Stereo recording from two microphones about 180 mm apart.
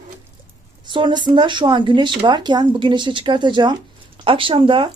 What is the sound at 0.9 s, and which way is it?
Speech, 25° right (ahead or behind).